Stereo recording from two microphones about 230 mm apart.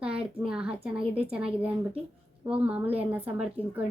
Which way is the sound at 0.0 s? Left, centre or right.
Centre.